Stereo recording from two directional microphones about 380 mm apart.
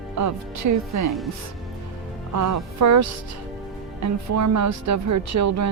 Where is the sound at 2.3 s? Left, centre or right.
Right.